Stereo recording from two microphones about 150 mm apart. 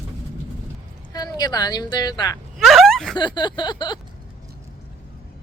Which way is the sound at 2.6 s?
Centre (ahead or behind).